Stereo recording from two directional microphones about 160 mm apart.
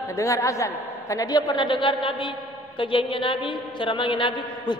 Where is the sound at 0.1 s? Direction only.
20° left (ahead or behind).